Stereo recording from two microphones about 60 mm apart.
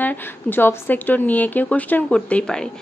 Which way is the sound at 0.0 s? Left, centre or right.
Left.